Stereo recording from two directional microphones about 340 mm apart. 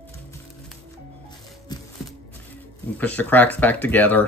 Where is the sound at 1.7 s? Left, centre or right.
Centre.